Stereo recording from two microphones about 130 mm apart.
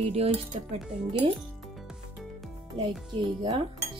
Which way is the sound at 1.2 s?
40° right (ahead or behind).